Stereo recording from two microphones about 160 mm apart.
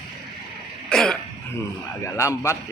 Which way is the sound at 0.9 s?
Centre (ahead or behind).